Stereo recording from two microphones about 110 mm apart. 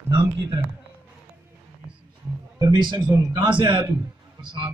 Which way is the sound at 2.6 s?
40° right (ahead or behind).